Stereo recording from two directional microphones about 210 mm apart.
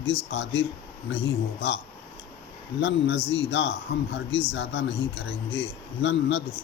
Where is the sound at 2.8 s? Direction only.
55° left (ahead or behind).